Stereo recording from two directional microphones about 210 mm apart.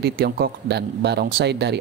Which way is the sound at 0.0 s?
50° right (ahead or behind).